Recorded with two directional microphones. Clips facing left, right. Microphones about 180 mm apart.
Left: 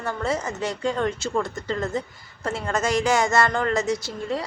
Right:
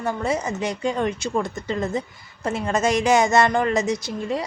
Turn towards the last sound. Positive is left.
turn(degrees=-20)  # may be behind; listen again after turning